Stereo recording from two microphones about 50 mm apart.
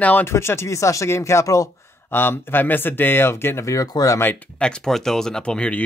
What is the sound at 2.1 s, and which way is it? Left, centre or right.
Speech, left.